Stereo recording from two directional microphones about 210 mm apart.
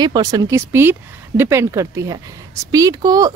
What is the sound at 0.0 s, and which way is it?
Speech, 20° right (ahead or behind).